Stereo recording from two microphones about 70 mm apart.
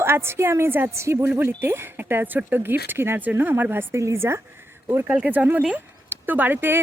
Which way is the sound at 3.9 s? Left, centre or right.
Right.